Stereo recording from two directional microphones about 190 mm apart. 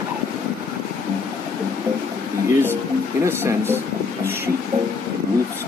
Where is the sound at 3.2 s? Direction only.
10° right (ahead or behind).